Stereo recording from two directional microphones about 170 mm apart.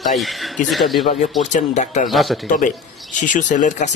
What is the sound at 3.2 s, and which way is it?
Speech, 50° left (ahead or behind).